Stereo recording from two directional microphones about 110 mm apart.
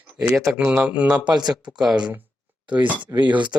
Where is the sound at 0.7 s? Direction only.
10° right (ahead or behind).